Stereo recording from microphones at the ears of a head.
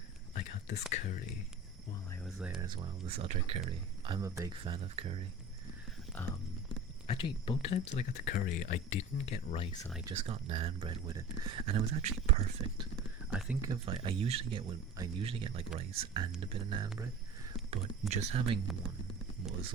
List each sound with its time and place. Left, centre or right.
0.3 s speech: left
2.6 s speech: right
7.1 s speech: left
10.1 s speech: right